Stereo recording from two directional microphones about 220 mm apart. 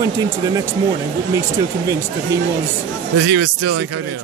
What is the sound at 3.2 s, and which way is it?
Speech, 50° right (ahead or behind).